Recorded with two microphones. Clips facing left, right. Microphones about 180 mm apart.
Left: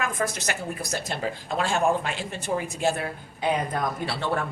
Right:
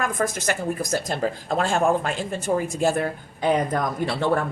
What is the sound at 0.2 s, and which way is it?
Speech, 50° right (ahead or behind).